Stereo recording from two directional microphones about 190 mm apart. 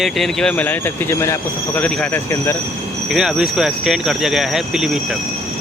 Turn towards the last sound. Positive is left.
turn(degrees=0)  # may be behind; listen again after turning